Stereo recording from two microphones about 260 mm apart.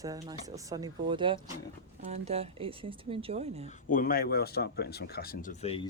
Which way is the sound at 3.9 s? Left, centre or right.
Left.